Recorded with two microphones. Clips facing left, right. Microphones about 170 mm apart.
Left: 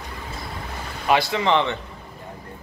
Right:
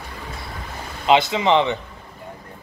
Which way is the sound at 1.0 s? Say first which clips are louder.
Right 3 dB; 20° right (ahead or behind).